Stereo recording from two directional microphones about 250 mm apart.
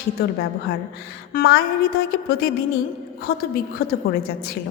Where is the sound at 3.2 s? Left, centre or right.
Left.